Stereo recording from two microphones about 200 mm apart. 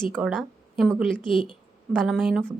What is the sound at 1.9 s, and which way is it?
Speech, centre (ahead or behind).